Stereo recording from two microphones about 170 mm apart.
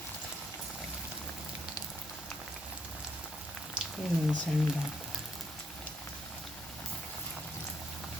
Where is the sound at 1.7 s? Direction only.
5° right (ahead or behind).